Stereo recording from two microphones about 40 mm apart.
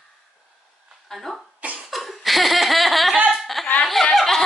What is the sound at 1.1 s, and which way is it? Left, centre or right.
Cough, centre.